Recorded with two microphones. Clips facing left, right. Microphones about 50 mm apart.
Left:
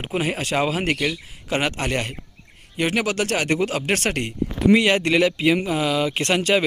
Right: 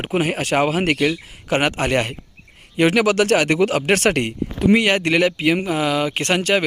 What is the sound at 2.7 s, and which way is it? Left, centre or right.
Speech, right.